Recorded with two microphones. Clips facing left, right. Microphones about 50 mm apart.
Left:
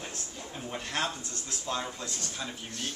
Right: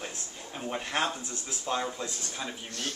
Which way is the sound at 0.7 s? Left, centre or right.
Centre.